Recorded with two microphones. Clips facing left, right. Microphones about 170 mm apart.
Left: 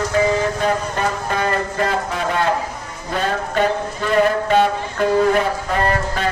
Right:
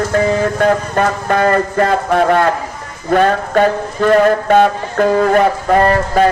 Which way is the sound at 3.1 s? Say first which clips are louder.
Right 9 dB; 55° right (ahead or behind).